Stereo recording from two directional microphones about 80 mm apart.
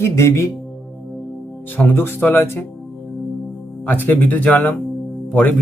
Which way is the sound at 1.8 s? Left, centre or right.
Left.